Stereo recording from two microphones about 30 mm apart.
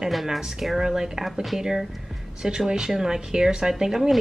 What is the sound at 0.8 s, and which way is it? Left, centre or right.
Speech, centre.